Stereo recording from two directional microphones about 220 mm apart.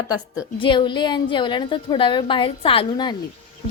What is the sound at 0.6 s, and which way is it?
A woman's voice, 20° left (ahead or behind).